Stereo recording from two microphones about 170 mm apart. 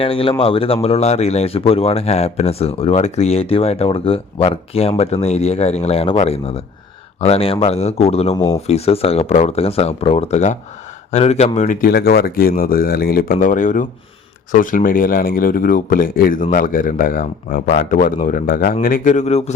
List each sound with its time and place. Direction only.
0.0 s speech: 35° left (ahead or behind)
8.4 s speech: 20° left (ahead or behind)
8.6 s speech: 35° left (ahead or behind); by 13.3 s 60° left (ahead or behind)
13.4 s speech: 50° left (ahead or behind)